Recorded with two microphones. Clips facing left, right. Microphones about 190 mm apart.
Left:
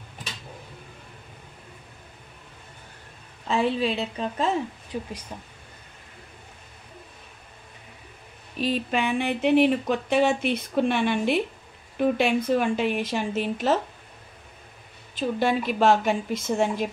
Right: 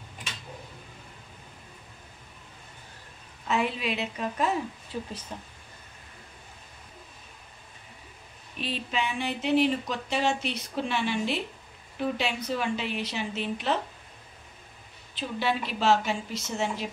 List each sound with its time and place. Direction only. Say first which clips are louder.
3.4 s a woman's voice: left 5 dB; 30° left (ahead or behind)
4.9 s speech: left 3 dB; 15° left (ahead or behind)
8.5 s a woman's voice: left 6 dB; 45° left (ahead or behind)
15.1 s a woman's voice: left 6 dB; 50° left (ahead or behind)